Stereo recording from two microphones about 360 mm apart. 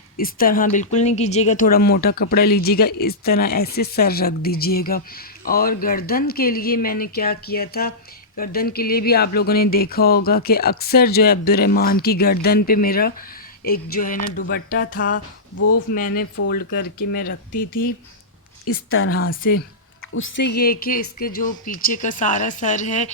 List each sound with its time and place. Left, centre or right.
0.2 s speech: left
15.1 s speech: left
15.9 s speech: left
17.5 s speech: left
18.6 s speech: left; by 23.1 s centre